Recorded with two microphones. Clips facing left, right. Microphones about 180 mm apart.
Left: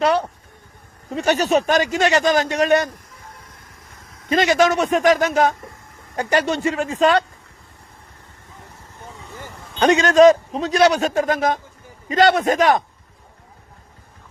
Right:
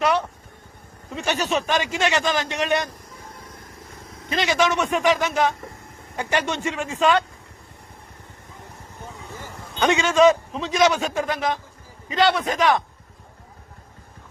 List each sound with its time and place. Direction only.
0.0 s a man's voice: 30° left (ahead or behind)
1.1 s speech: 40° left (ahead or behind)
4.4 s a man's voice: 45° left (ahead or behind)
9.8 s a man's voice: 40° left (ahead or behind)